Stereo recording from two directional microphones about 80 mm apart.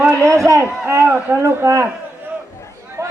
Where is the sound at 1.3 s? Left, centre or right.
Right.